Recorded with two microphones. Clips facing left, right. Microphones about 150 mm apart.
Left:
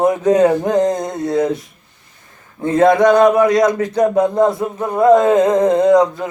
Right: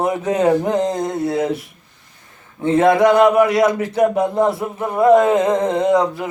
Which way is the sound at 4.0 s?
20° left (ahead or behind).